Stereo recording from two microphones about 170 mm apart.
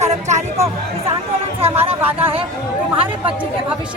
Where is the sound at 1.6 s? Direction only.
35° right (ahead or behind).